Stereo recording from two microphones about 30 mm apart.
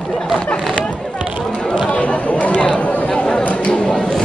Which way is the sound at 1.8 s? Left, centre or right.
Left.